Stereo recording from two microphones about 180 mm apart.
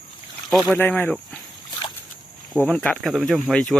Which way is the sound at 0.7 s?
10° left (ahead or behind).